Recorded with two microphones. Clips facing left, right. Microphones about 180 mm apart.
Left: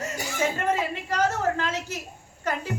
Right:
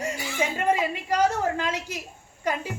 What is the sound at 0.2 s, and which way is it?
Music, 45° left (ahead or behind).